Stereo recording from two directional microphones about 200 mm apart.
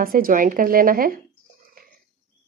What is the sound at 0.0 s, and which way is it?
Speech, 45° right (ahead or behind).